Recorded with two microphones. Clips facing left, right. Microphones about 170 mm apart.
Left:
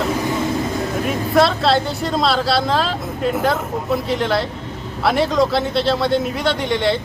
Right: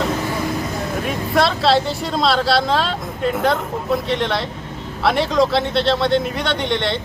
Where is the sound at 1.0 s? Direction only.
Centre (ahead or behind).